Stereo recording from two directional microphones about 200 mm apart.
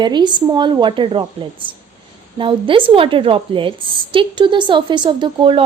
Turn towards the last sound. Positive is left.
turn(degrees=-25)  # may be behind; listen again after turning